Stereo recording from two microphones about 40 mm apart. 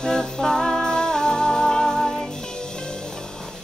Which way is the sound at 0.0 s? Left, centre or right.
Centre.